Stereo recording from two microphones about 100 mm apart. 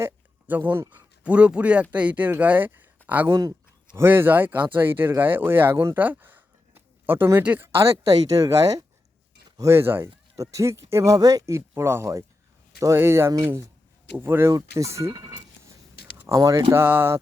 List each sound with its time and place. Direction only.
0.0 s speech: 20° right (ahead or behind)
10.3 s speech: 35° right (ahead or behind)
16.7 s speech: 20° right (ahead or behind)